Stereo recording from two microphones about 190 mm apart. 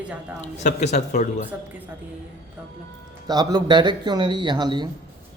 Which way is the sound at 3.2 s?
20° right (ahead or behind).